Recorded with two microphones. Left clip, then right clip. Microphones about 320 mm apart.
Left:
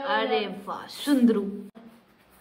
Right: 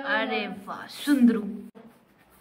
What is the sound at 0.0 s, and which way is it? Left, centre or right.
A woman's voice, centre.